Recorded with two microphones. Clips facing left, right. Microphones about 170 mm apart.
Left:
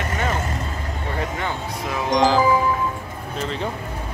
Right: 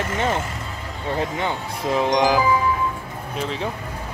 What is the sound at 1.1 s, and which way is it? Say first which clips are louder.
Speech: right 3 dB; 20° right (ahead or behind).